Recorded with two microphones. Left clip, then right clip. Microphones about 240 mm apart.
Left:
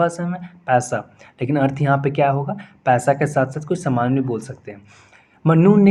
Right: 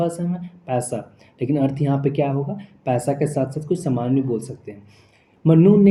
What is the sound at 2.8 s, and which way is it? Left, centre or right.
Speech, left.